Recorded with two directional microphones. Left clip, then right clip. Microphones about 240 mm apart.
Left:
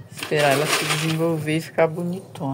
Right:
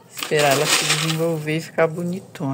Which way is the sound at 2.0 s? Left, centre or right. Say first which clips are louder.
Right 1 dB; right.